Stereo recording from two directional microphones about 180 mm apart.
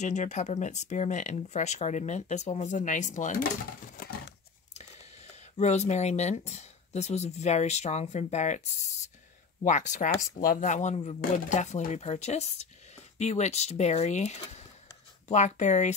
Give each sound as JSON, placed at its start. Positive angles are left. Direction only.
{"t": 0.0, "sound": "speech", "side_deg": 40}
{"t": 4.7, "sound": "speech", "side_deg": 35}